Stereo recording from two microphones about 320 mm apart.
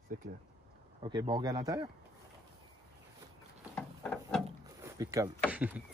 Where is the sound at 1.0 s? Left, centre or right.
Centre.